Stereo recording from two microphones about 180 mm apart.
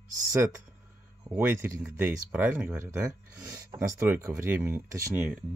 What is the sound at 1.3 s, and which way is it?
Speech, 10° right (ahead or behind).